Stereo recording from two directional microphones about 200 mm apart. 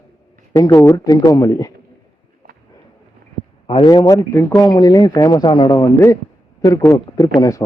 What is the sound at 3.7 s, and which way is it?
Speech, 25° left (ahead or behind).